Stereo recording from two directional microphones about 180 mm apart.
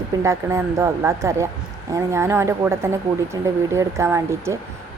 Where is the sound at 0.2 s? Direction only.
15° right (ahead or behind).